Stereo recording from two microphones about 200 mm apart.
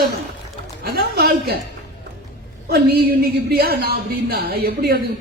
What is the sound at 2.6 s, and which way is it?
A man's voice, 50° right (ahead or behind).